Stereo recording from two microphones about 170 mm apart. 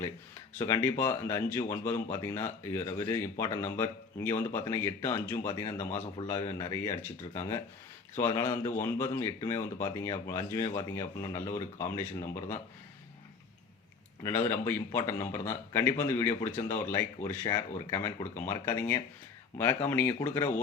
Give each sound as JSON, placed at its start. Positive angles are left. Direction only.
{"t": 0.6, "sound": "speech", "side_deg": 15}
{"t": 6.2, "sound": "speech", "side_deg": 30}
{"t": 6.6, "sound": "speech", "side_deg": 20}
{"t": 14.2, "sound": "speech", "side_deg": 15}